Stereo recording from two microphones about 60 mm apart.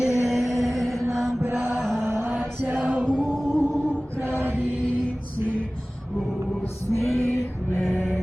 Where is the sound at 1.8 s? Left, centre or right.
Centre.